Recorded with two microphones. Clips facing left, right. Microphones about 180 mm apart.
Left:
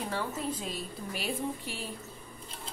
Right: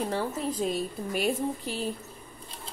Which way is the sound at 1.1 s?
50° right (ahead or behind).